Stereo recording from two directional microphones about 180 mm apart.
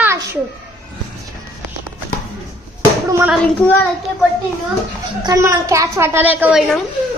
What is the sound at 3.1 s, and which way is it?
Hands, 10° right (ahead or behind).